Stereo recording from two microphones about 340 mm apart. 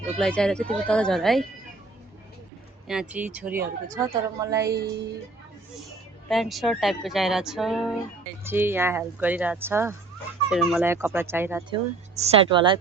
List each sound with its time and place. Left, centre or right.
0.0 s speech: centre
2.8 s speech: centre
4.7 s music: right
6.2 s speech: centre